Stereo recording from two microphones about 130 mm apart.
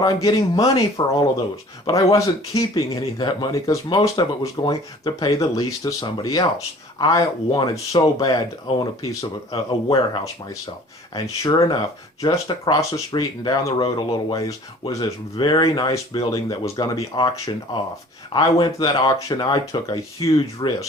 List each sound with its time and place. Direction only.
0.0 s speech: 30° left (ahead or behind)
4.7 s speech: 25° left (ahead or behind)
7.5 s speech: 40° left (ahead or behind)
8.2 s speech: 30° left (ahead or behind)
11.1 s speech: 30° left (ahead or behind)
18.3 s speech: 40° left (ahead or behind)